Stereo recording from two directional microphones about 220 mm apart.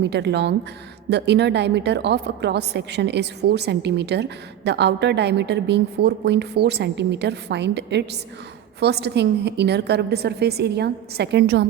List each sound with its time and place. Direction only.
0.0 s a woman's voice: 50° right (ahead or behind)